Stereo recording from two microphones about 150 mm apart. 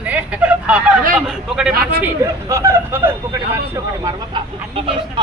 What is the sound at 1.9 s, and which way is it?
A woman's voice, 15° right (ahead or behind).